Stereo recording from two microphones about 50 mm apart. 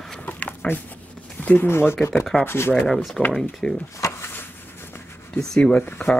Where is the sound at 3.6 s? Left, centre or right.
Centre.